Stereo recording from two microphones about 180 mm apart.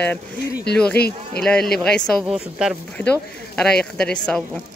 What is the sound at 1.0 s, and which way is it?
Speech, 60° left (ahead or behind).